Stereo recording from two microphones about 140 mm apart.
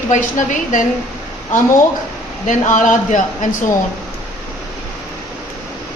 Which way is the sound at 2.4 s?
60° left (ahead or behind).